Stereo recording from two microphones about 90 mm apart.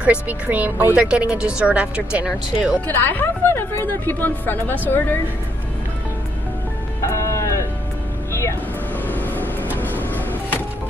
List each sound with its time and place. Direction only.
0.0 s speech: 15° right (ahead or behind)
0.9 s speech: 10° right (ahead or behind)
2.9 s a woman's voice: 20° left (ahead or behind)
7.1 s a sound: 35° left (ahead or behind)
8.3 s music: 35° left (ahead or behind)
9.0 s vehicle: 20° left (ahead or behind)
9.8 s music: 20° left (ahead or behind)